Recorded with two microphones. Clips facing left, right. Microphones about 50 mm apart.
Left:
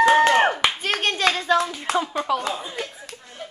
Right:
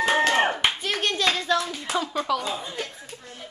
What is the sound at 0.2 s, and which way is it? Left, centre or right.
Clapping, left.